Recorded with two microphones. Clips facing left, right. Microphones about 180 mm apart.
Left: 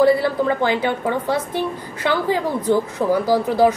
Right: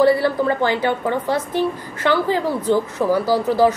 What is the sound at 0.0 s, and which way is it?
A woman's voice, 15° left (ahead or behind).